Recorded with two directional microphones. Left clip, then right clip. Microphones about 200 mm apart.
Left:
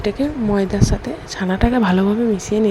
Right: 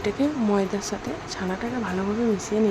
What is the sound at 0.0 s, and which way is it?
A woman's voice, 20° left (ahead or behind).